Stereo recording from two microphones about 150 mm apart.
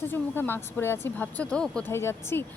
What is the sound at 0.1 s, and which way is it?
Speech, 15° left (ahead or behind).